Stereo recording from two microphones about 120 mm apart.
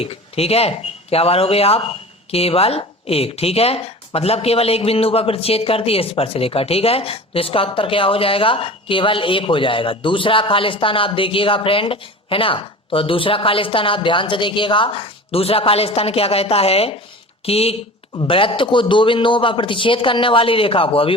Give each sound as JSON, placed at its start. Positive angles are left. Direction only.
{"t": 0.0, "sound": "speech", "side_deg": 55}